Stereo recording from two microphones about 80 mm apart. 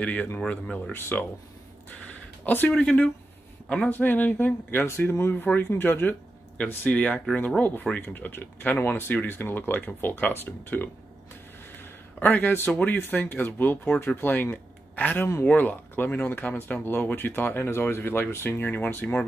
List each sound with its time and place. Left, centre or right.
0.0 s speech: left
0.9 s speech: left
2.4 s speech: left
2.7 s speech: centre
3.9 s speech: left